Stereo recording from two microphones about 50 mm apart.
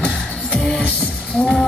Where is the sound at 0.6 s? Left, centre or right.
Centre.